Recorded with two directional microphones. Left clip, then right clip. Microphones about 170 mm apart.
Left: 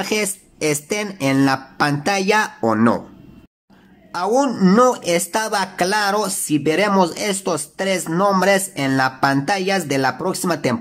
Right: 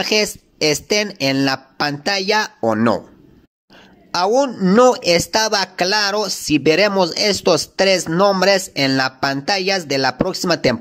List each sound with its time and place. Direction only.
0.0 s speech: 25° right (ahead or behind)
4.1 s speech: 30° right (ahead or behind)
4.5 s speech: 15° right (ahead or behind)
4.7 s speech: 30° right (ahead or behind)